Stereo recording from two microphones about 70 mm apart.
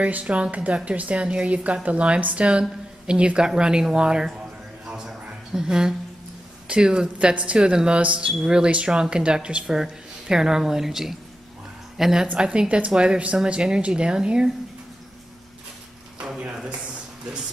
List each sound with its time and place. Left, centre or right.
0.0 s speech: centre
4.8 s a sound: centre
5.5 s speech: centre